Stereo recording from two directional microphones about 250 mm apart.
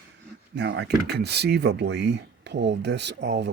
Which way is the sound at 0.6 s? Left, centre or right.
Right.